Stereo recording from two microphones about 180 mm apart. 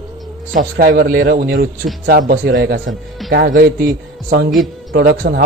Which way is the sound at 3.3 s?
50° right (ahead or behind).